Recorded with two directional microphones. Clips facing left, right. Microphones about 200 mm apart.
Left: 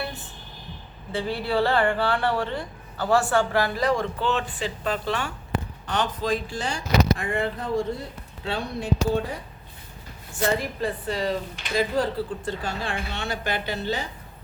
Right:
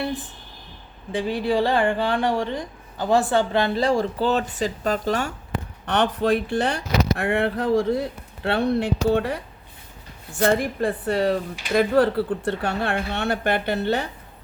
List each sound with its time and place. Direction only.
1.1 s speech: 15° right (ahead or behind); by 5.3 s 40° right (ahead or behind)
5.8 s speech: 60° right (ahead or behind); by 8.0 s 90° right
8.4 s speech: 65° right (ahead or behind)
10.4 s speech: 55° right (ahead or behind)